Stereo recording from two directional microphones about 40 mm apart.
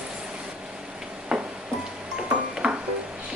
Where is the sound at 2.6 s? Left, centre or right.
Right.